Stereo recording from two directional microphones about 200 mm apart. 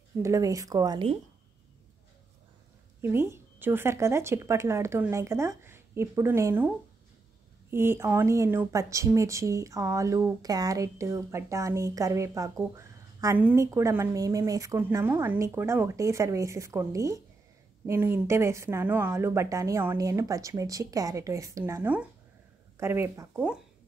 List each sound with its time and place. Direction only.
0.2 s speech: 15° right (ahead or behind)
3.0 s speech: 10° right (ahead or behind)
7.7 s speech: 10° right (ahead or behind)